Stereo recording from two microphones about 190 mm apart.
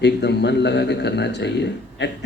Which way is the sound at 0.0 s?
65° left (ahead or behind).